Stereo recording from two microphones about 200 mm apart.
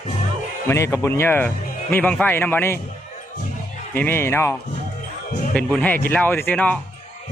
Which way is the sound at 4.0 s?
10° left (ahead or behind).